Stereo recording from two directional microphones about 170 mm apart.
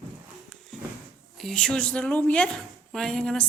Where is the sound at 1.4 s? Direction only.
5° left (ahead or behind).